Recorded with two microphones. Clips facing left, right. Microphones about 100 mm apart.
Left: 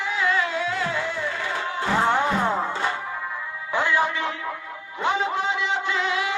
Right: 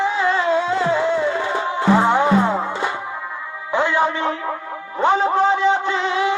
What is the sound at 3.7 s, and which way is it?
Music, 25° right (ahead or behind).